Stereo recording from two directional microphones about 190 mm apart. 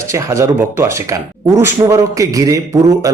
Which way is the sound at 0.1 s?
15° right (ahead or behind).